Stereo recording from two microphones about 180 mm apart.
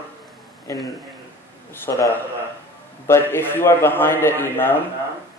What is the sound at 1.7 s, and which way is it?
A man's voice, 10° left (ahead or behind).